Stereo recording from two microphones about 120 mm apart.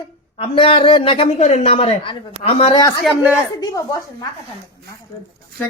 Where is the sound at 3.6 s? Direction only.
30° left (ahead or behind).